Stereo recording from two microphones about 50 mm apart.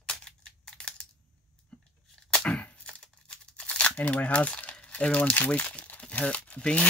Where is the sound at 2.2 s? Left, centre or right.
Left.